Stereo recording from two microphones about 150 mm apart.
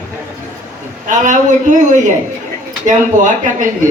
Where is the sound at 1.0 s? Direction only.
55° right (ahead or behind).